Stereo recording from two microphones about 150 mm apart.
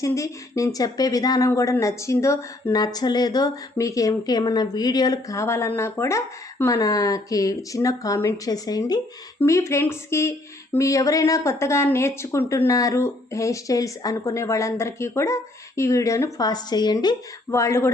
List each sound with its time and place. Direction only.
0.0 s speech: 20° left (ahead or behind)